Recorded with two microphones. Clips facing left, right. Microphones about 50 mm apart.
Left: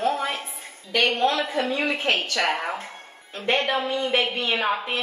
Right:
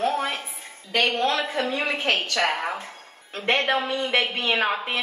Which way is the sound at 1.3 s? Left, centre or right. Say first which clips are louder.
Left 1 dB; right.